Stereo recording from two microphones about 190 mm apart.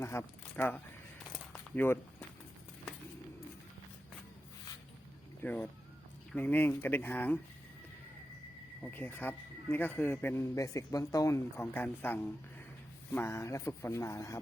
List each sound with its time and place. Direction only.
0.0 s a man's voice: 15° left (ahead or behind)
1.3 s a sound: 10° left (ahead or behind)
5.4 s a man's voice: 10° left (ahead or behind)
8.8 s a man's voice: 10° left (ahead or behind)